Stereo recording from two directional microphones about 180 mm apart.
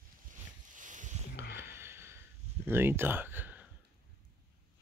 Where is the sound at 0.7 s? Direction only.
45° right (ahead or behind).